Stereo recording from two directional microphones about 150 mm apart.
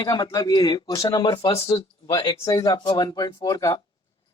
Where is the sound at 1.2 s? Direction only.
40° left (ahead or behind).